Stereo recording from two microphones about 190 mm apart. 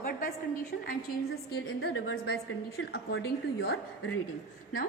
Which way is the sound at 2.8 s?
60° left (ahead or behind).